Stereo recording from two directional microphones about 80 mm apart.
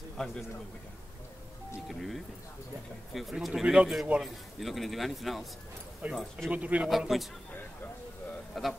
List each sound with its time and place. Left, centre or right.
0.2 s a man's voice: centre
1.9 s a man's voice: centre
6.0 s a man's voice: centre
6.9 s a man's voice: centre
8.5 s a man's voice: centre